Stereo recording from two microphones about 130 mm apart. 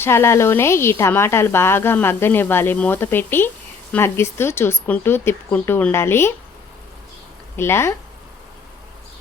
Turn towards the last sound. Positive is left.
turn(degrees=20)  # may be behind; listen again after turning